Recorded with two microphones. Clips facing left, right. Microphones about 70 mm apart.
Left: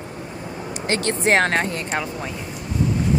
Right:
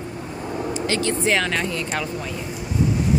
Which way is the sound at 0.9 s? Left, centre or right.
Left.